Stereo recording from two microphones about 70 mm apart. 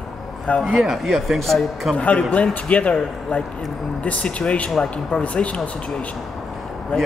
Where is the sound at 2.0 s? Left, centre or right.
Centre.